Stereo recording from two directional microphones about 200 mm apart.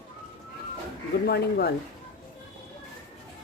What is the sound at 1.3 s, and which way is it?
Speech, 55° left (ahead or behind).